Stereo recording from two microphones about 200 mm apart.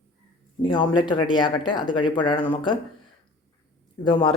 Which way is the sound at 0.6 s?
25° left (ahead or behind).